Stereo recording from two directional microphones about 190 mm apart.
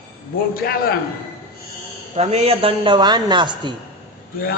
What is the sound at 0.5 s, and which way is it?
Speech, 50° left (ahead or behind).